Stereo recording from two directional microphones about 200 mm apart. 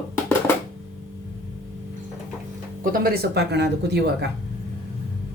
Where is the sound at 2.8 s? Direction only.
45° right (ahead or behind).